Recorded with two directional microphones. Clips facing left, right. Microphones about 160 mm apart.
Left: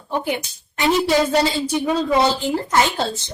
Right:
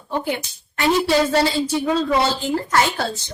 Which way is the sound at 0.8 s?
20° left (ahead or behind).